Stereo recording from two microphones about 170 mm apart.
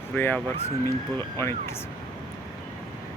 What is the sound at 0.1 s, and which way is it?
Speech, 10° left (ahead or behind).